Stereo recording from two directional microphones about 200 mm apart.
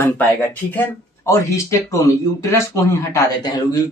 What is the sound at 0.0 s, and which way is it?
Speech, 10° left (ahead or behind).